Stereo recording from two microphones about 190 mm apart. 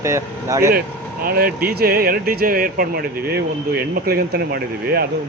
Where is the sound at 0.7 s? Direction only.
50° right (ahead or behind).